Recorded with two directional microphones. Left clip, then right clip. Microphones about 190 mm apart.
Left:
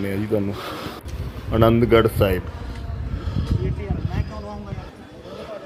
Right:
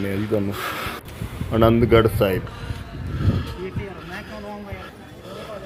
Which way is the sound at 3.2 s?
20° left (ahead or behind).